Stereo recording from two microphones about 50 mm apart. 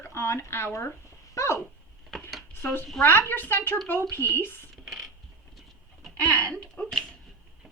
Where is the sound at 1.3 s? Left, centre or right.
Left.